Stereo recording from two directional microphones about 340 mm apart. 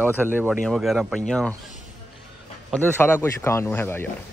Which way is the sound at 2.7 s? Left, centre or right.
Centre.